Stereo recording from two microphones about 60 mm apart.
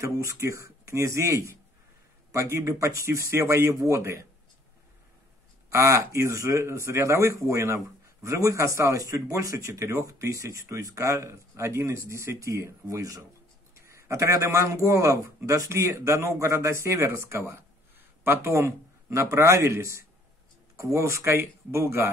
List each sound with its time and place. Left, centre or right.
0.0 s speech: right
3.3 s a man's voice: right
5.7 s speech: right
12.8 s speech: right
13.7 s a man's voice: right